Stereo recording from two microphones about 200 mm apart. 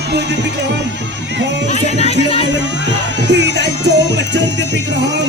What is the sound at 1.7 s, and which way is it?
Music, 35° left (ahead or behind).